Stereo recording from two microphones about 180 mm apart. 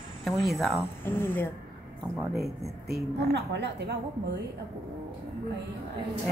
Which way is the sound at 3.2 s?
70° right (ahead or behind).